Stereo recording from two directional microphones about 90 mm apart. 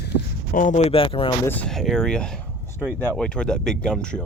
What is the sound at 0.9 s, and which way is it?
Speech, 90° left.